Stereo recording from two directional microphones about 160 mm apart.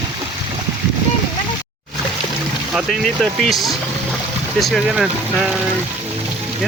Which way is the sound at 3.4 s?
Centre (ahead or behind).